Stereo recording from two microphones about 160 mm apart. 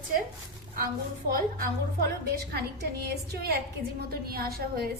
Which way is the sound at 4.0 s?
70° right (ahead or behind).